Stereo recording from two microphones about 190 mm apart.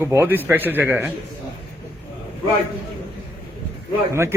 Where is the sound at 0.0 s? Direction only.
15° right (ahead or behind).